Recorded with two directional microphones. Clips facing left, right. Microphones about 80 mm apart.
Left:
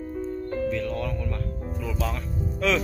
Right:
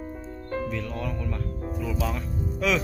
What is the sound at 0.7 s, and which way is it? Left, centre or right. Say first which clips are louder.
Speech: left 4 dB; centre.